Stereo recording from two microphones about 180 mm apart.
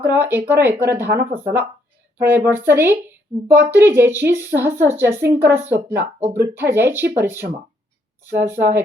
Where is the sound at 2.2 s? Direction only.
10° right (ahead or behind).